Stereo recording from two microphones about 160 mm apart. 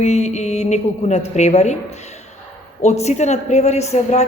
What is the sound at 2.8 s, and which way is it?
Speech, 45° left (ahead or behind).